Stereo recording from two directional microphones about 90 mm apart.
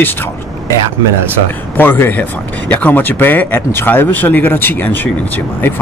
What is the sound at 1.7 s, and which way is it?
Speech, 25° left (ahead or behind).